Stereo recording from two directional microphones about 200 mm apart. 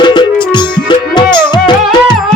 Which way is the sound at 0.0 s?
20° left (ahead or behind).